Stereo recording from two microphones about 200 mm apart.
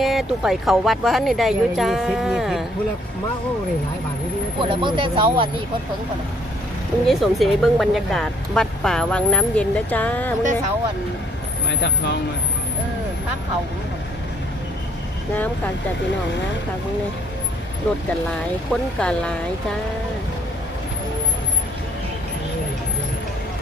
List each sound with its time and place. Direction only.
0.0 s speech: centre (ahead or behind)
4.6 s speech: 25° right (ahead or behind)
7.1 s speech: centre (ahead or behind)
11.7 s speech: 60° left (ahead or behind)
18.7 s speech: 5° left (ahead or behind)